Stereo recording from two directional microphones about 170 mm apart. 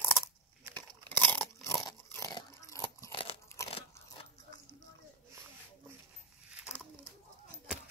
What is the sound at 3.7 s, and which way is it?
Biting, 35° left (ahead or behind).